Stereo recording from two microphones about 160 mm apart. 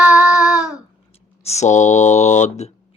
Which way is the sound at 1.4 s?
45° left (ahead or behind).